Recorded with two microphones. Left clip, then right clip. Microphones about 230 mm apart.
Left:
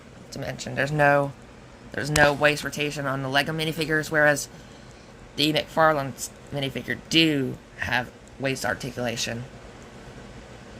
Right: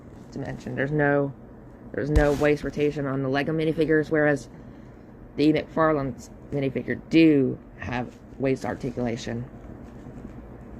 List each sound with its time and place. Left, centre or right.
0.3 s speech: left
2.4 s speech: left